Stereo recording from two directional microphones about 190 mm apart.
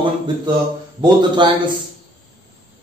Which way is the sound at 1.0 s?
20° right (ahead or behind).